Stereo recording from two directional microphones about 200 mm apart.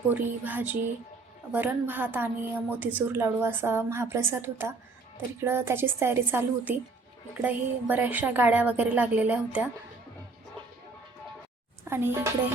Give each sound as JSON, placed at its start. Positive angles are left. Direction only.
{"t": 0.1, "sound": "a woman's voice", "side_deg": -10}
{"t": 11.9, "sound": "a woman's voice", "side_deg": -10}